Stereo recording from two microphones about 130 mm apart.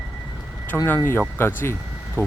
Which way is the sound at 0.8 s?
15° left (ahead or behind).